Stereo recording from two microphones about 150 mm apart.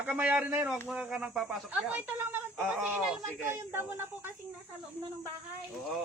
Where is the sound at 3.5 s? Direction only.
15° right (ahead or behind).